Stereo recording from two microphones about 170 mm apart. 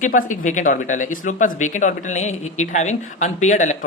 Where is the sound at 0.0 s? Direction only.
50° left (ahead or behind).